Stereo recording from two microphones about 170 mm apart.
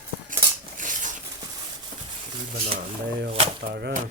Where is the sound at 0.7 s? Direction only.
50° right (ahead or behind).